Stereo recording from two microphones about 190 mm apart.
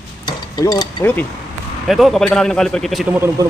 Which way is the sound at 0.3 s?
20° left (ahead or behind).